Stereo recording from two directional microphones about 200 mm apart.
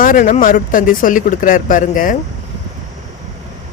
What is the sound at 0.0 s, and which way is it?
Speech, 40° left (ahead or behind).